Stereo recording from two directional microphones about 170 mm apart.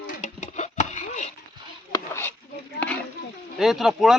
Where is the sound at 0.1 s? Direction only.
45° left (ahead or behind).